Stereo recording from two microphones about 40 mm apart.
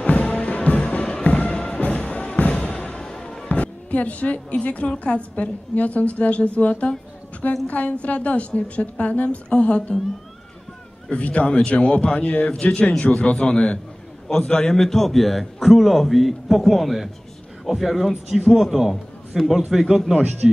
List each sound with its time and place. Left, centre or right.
0.1 s music: left
1.0 s music: left
3.4 s a woman's voice: left
11.1 s a woman's voice: left
12.4 s a man's voice: left
14.2 s a man's voice: centre
20.2 s speech: right